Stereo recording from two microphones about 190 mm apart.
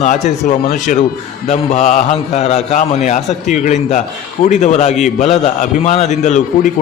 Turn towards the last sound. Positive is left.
turn(degrees=40)  # may be behind; listen again after turning